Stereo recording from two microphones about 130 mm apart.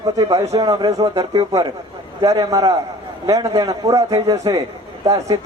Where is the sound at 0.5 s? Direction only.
30° right (ahead or behind).